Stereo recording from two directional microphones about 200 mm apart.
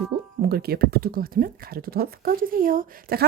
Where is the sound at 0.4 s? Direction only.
50° right (ahead or behind).